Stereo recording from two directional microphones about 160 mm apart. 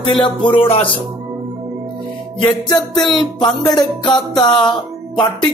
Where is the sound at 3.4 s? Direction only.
25° left (ahead or behind).